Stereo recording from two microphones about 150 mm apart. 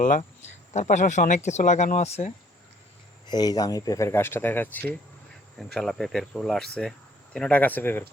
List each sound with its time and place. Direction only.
0.7 s speech: 50° left (ahead or behind)
3.2 s speech: 25° left (ahead or behind); by 4.9 s 10° left (ahead or behind)
5.5 s speech: centre (ahead or behind)